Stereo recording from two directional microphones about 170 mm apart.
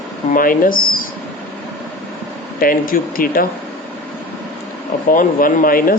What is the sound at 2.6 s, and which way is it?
Speech, 55° left (ahead or behind).